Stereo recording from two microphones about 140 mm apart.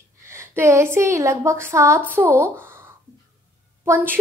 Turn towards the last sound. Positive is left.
turn(degrees=-15)  # may be behind; listen again after turning